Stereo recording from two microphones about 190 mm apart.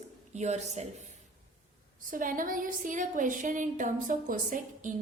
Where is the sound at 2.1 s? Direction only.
45° right (ahead or behind).